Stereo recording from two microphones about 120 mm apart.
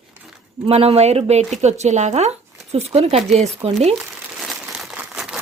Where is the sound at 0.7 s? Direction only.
60° right (ahead or behind).